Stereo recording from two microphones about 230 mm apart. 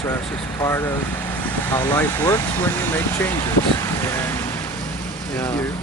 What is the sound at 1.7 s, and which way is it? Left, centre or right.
Speech, centre.